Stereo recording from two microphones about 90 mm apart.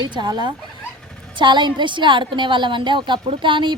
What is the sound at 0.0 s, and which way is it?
A woman's voice, 55° right (ahead or behind).